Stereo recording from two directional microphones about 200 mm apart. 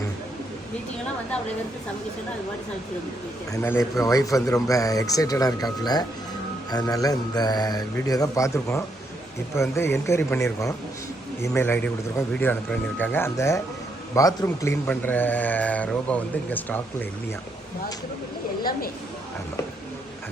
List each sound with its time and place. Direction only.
3.5 s a man's voice: 15° left (ahead or behind)
11.4 s a man's voice: 10° left (ahead or behind)